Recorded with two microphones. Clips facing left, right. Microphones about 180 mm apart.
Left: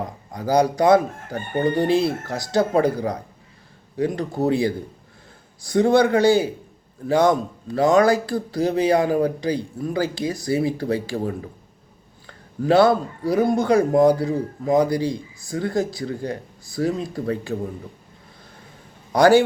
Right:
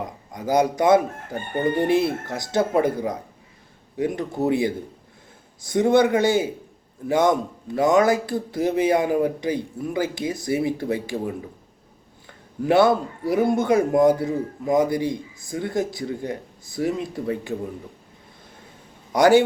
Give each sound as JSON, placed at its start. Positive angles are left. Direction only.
{"t": 0.3, "sound": "chicken", "side_deg": -20}
{"t": 3.9, "sound": "speech", "side_deg": -20}
{"t": 4.4, "sound": "chicken", "side_deg": -20}
{"t": 12.6, "sound": "chicken", "side_deg": -20}
{"t": 19.1, "sound": "chicken", "side_deg": -20}